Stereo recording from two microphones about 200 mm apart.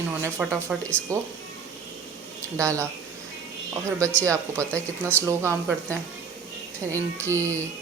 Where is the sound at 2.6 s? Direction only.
15° right (ahead or behind).